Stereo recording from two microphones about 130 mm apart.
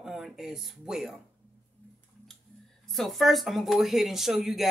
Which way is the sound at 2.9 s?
Centre (ahead or behind).